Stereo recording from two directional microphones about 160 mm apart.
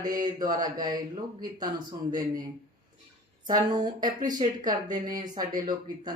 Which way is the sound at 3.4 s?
25° right (ahead or behind).